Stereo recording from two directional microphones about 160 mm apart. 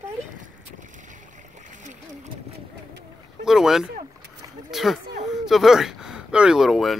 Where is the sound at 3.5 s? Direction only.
5° right (ahead or behind).